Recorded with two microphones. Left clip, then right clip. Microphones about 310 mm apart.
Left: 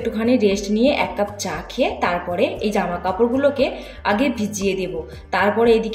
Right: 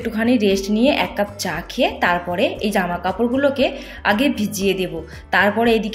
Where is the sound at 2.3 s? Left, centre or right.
Right.